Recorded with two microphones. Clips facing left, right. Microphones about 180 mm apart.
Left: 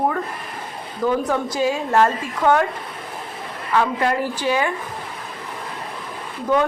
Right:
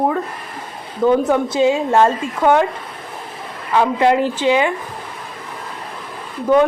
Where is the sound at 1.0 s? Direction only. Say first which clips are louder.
Right 6 dB; 25° right (ahead or behind).